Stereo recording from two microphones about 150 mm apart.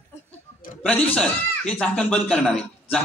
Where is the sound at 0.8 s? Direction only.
10° left (ahead or behind).